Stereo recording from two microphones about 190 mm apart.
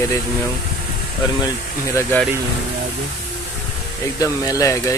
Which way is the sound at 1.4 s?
15° left (ahead or behind).